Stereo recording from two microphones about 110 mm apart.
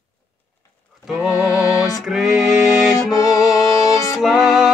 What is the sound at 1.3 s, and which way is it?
Music, 30° left (ahead or behind).